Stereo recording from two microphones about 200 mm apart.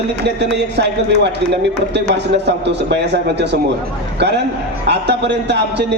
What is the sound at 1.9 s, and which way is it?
A man's voice, 60° right (ahead or behind).